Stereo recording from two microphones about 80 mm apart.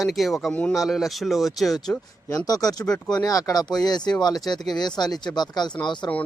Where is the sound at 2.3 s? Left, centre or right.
Left.